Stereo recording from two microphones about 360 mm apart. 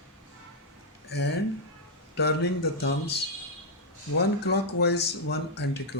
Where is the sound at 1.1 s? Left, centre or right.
Left.